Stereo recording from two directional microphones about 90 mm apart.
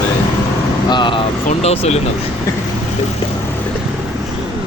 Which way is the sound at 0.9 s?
60° left (ahead or behind).